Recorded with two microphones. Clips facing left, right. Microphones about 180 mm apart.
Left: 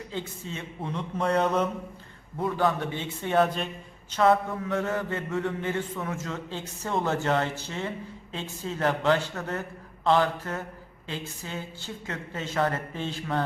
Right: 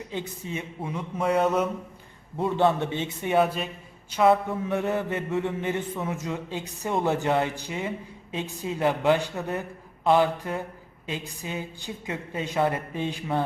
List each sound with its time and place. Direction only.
0.1 s a man's voice: 15° right (ahead or behind)
2.4 s a man's voice: 25° right (ahead or behind)
3.3 s a man's voice: 5° right (ahead or behind)